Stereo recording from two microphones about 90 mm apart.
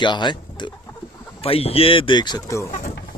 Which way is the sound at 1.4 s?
90° left.